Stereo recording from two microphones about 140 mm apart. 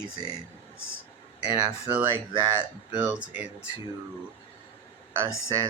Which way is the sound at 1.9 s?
10° right (ahead or behind).